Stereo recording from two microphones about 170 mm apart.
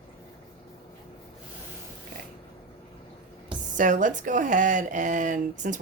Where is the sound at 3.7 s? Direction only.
50° right (ahead or behind).